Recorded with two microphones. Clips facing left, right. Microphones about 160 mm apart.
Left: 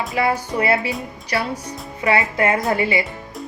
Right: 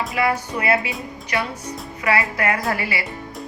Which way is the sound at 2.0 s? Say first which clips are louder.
Left 3 dB; 25° left (ahead or behind).